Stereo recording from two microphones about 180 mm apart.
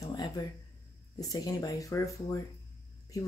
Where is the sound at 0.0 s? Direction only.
20° left (ahead or behind).